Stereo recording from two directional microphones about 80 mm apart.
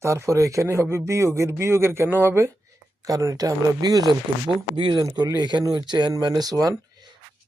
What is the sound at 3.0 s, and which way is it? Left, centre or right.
Speech, right.